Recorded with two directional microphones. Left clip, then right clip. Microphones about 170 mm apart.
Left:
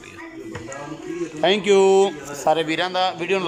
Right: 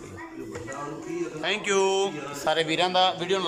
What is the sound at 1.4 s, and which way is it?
Speech, 30° left (ahead or behind).